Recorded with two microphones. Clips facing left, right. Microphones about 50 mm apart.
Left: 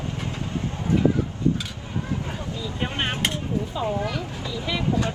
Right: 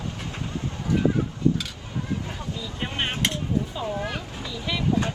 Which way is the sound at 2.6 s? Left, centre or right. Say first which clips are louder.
Left 2 dB; left.